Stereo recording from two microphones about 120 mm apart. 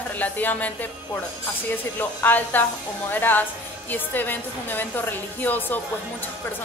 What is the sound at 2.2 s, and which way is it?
A woman's voice, 15° left (ahead or behind).